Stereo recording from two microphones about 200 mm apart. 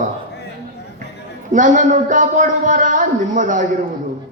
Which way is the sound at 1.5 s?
40° right (ahead or behind).